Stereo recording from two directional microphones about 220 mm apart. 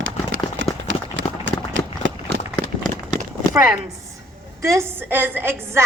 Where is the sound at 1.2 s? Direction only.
60° right (ahead or behind).